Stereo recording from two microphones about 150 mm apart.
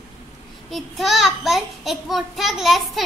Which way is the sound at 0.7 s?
Centre (ahead or behind).